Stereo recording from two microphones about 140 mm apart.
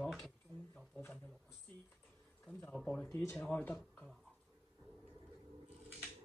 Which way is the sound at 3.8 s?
Centre (ahead or behind).